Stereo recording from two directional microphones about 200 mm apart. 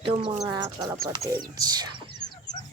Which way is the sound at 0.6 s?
15° right (ahead or behind).